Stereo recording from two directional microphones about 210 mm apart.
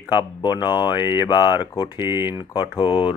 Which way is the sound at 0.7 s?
10° right (ahead or behind).